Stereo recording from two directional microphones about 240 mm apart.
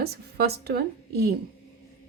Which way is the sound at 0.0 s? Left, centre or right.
Right.